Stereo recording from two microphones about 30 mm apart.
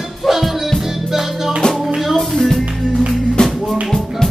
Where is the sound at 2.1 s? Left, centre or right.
Centre.